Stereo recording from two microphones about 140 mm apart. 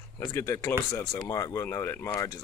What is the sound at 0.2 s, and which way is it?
Speech, 20° left (ahead or behind).